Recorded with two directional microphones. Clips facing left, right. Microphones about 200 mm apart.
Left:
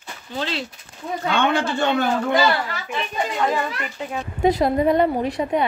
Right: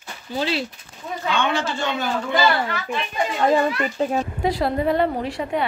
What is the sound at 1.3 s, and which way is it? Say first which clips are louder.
A man's voice: left 3 dB; 60° left (ahead or behind).